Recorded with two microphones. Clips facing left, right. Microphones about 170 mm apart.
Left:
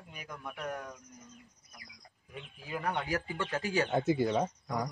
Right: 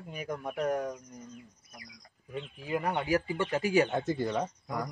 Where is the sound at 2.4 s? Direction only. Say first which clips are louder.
Right 7 dB; 20° right (ahead or behind).